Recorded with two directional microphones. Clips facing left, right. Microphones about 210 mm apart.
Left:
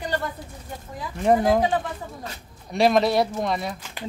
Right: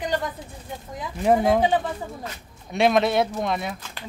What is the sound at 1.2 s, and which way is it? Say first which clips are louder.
Speech: even; centre (ahead or behind).